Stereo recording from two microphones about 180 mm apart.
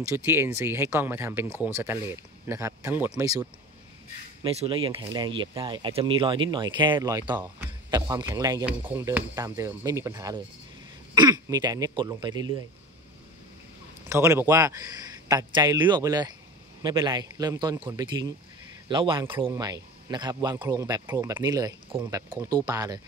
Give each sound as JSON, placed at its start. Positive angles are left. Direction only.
{"t": 0.0, "sound": "speech", "side_deg": -15}
{"t": 4.4, "sound": "speech", "side_deg": -30}
{"t": 14.0, "sound": "speech", "side_deg": -15}